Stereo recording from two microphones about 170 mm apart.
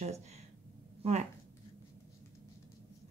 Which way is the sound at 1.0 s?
35° right (ahead or behind).